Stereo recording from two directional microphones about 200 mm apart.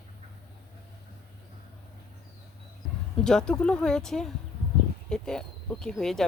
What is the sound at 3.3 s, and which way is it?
Speech, 5° left (ahead or behind).